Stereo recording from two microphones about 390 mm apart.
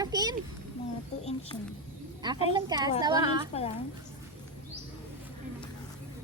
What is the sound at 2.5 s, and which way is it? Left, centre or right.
Speech, centre.